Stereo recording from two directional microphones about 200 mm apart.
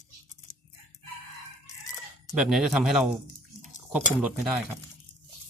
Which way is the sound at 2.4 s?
Centre (ahead or behind).